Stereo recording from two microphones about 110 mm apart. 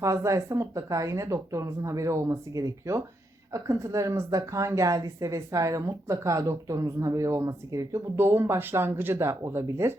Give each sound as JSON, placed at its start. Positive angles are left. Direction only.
{"t": 0.0, "sound": "a woman's voice", "side_deg": -30}